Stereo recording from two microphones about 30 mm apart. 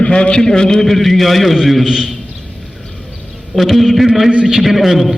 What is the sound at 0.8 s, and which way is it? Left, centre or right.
A man's voice, centre.